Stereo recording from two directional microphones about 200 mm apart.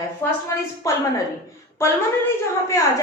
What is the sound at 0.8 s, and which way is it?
Speech, 15° left (ahead or behind).